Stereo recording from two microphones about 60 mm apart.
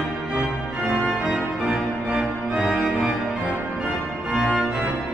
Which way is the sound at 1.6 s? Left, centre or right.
Centre.